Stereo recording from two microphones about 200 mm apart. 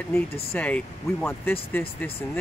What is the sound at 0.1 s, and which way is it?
Speech, 10° left (ahead or behind).